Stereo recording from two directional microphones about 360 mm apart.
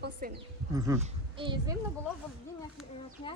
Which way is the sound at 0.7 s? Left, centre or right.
Centre.